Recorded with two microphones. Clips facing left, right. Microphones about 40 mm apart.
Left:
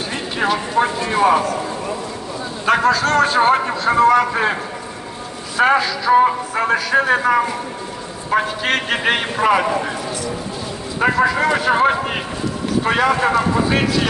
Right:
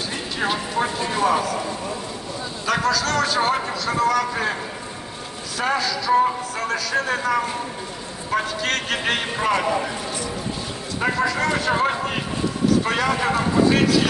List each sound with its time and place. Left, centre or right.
1.0 s speech: left
2.6 s a man's voice: left
5.6 s speech: left
11.0 s a man's voice: centre